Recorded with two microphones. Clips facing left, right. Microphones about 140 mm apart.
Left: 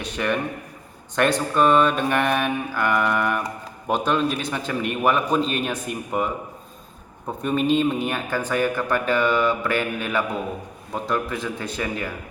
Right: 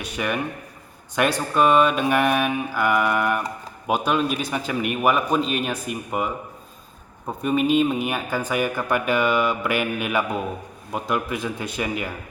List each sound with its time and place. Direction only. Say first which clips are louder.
0.0 s speech: left 1 dB; 10° right (ahead or behind)